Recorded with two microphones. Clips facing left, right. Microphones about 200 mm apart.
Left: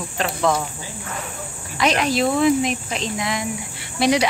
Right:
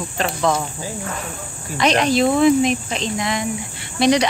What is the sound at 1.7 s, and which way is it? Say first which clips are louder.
Speech: right 3 dB; 5° left (ahead or behind).